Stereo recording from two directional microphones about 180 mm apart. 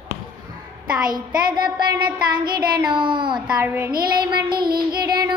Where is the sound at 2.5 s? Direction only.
25° right (ahead or behind).